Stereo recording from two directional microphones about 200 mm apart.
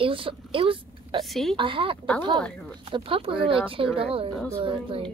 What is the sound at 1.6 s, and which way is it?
Speech, 25° right (ahead or behind).